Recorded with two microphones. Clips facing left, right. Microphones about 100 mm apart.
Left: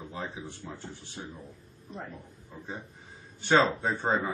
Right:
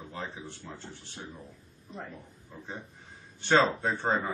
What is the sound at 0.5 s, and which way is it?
Speech, 10° left (ahead or behind).